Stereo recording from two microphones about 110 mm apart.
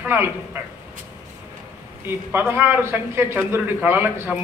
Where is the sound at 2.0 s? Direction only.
20° right (ahead or behind).